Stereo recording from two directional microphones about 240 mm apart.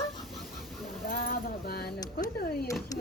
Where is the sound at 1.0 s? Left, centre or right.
Left.